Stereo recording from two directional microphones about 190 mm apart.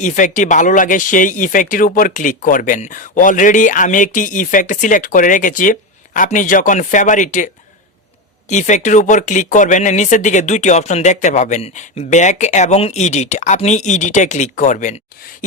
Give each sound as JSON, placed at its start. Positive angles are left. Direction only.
{"t": 0.0, "sound": "speech", "side_deg": 40}